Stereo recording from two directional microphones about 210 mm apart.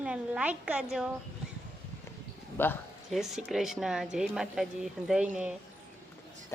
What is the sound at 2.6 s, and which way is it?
Speech, 10° left (ahead or behind).